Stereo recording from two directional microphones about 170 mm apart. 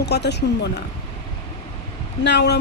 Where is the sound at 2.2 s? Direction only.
85° left.